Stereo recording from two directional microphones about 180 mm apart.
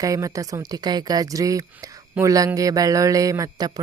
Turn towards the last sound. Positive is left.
turn(degrees=-20)  # may be behind; listen again after turning